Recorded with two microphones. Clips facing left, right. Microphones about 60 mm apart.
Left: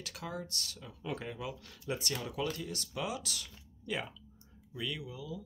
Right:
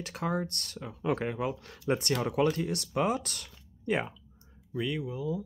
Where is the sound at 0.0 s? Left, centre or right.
Right.